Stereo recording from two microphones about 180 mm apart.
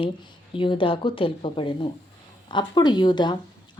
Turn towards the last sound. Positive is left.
turn(degrees=25)  # may be behind; listen again after turning